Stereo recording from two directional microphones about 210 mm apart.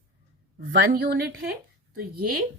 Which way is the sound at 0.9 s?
50° right (ahead or behind).